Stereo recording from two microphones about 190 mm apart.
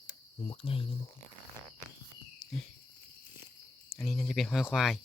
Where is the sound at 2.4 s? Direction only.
5° left (ahead or behind).